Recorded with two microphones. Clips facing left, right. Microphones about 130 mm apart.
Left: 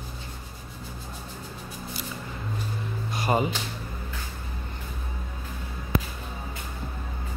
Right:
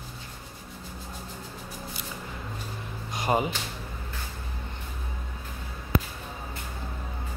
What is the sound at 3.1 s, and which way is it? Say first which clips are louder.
Music: left 1 dB; 15° right (ahead or behind).